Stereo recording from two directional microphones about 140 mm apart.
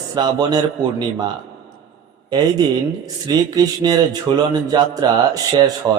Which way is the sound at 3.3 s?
25° right (ahead or behind).